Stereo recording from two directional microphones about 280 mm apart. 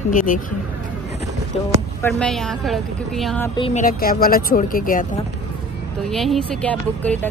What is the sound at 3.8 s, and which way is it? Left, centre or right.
Speech, left.